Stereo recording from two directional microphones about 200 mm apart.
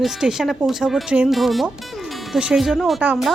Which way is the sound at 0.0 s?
Centre (ahead or behind).